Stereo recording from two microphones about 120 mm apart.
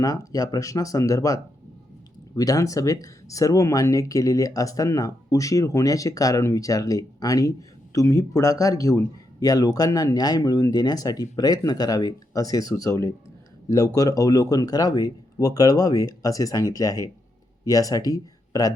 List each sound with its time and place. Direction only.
0.0 s a man's voice: 30° left (ahead or behind)